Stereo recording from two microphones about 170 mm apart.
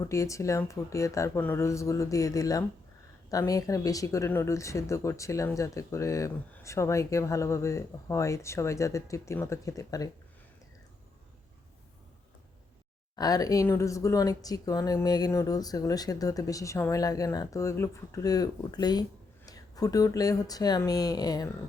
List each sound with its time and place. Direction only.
0.1 s speech: 20° left (ahead or behind)
13.1 s speech: 20° left (ahead or behind)